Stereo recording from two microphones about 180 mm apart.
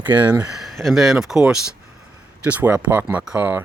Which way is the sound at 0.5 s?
Centre (ahead or behind).